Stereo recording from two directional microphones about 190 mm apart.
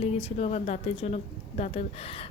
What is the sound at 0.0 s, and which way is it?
Speech, 35° left (ahead or behind).